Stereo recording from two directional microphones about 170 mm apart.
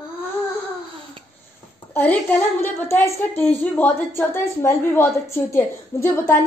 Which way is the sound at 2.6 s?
15° left (ahead or behind).